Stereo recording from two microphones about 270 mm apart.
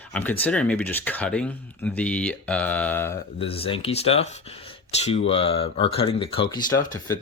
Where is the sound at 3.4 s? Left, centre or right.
Left.